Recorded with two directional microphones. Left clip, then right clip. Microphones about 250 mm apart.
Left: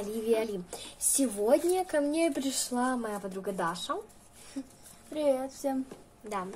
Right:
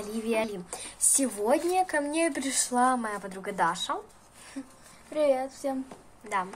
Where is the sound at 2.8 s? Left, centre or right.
Right.